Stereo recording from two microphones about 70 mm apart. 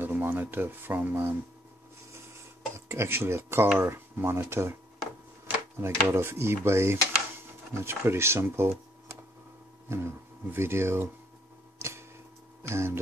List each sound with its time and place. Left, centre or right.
0.0 s speech: right
2.7 s speech: right
5.8 s speech: right
9.8 s speech: right
11.8 s tick-tock: right
12.6 s speech: right